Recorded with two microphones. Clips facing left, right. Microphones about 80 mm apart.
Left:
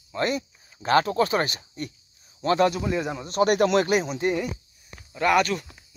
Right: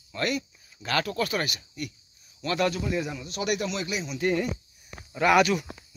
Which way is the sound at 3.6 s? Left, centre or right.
Left.